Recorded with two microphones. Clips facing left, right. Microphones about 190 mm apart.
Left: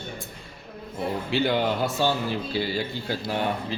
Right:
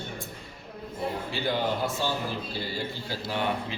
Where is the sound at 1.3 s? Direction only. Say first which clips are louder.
Left 6 dB; 75° left (ahead or behind).